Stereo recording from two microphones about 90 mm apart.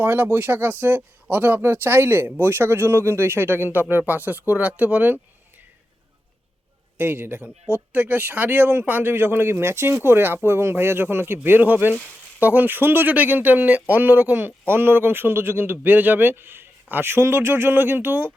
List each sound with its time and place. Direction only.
0.0 s speech: 20° right (ahead or behind)
6.9 s speech: 20° right (ahead or behind)